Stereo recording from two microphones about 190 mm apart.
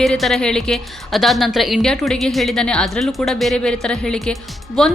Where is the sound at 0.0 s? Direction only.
Centre (ahead or behind).